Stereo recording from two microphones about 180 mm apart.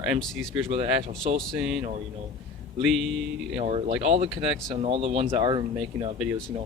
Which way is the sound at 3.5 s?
35° right (ahead or behind).